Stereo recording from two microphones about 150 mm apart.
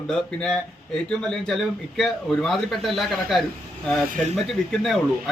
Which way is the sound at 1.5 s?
Centre (ahead or behind).